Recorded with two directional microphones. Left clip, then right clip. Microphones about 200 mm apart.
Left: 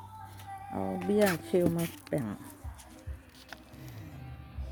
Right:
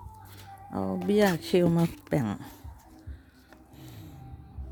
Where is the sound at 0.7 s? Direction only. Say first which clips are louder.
Right 3 dB; 50° right (ahead or behind).